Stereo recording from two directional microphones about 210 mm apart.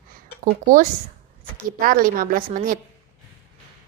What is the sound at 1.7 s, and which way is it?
A woman's voice, 40° right (ahead or behind).